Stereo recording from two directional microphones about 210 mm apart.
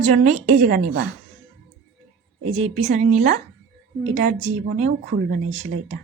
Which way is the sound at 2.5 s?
35° right (ahead or behind).